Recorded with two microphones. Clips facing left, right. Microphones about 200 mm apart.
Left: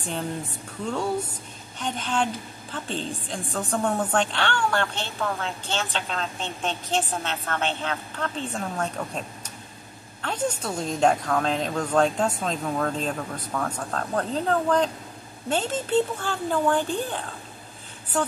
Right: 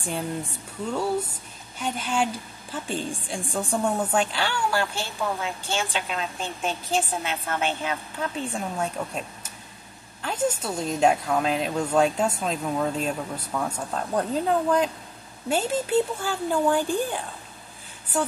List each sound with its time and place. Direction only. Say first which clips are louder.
1.8 s a woman's voice: right 1 dB; 5° right (ahead or behind)
10.2 s a woman's voice: right 1 dB; 5° right (ahead or behind)